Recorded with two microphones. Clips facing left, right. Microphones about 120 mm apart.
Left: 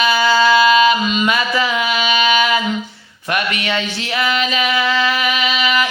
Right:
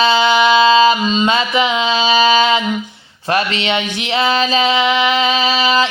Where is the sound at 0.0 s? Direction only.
25° right (ahead or behind).